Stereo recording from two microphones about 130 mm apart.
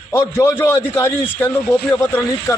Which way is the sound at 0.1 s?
20° left (ahead or behind).